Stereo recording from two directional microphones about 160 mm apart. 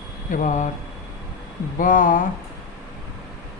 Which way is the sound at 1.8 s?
55° left (ahead or behind).